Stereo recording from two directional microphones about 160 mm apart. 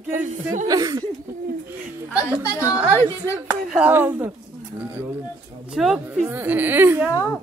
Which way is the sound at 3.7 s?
10° right (ahead or behind).